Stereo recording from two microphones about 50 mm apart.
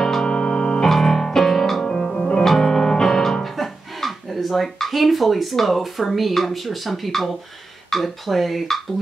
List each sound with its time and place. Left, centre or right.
0.0 s music: centre
3.5 s speech: centre
7.9 s dishes: centre